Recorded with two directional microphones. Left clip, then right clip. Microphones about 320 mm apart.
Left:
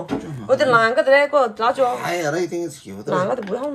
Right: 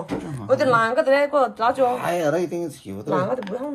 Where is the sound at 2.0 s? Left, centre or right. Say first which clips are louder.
Even; centre.